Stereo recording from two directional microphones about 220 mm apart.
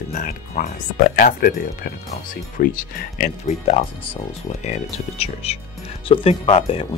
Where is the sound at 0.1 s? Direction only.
40° left (ahead or behind).